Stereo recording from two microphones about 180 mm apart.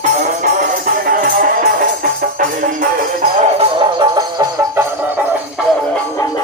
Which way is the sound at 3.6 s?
25° right (ahead or behind).